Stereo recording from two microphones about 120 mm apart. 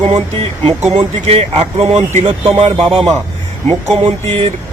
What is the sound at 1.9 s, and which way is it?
Speech, 75° right (ahead or behind).